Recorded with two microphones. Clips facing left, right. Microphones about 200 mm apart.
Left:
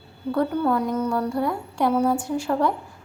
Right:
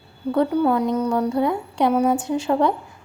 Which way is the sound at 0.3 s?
15° right (ahead or behind).